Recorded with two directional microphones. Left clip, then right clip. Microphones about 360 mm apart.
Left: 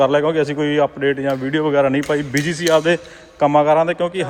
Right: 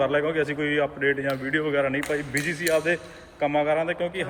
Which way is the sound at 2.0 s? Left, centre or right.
Left.